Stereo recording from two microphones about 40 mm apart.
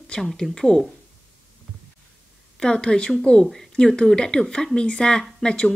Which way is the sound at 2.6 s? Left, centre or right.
Left.